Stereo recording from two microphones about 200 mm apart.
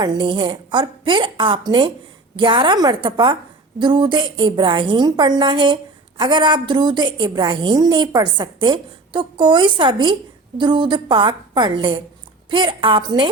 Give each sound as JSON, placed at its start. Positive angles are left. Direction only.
{"t": 0.0, "sound": "a woman's voice", "side_deg": -20}